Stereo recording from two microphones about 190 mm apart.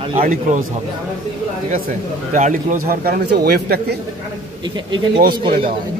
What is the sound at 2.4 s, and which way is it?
A man's voice, 45° right (ahead or behind).